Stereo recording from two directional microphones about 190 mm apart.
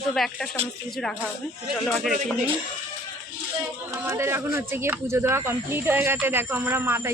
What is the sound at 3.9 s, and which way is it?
Speech, 15° right (ahead or behind).